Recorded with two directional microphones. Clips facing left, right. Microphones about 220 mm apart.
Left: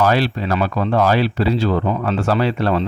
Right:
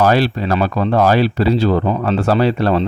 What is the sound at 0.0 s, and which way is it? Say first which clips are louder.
Speech: right 3 dB; 40° right (ahead or behind).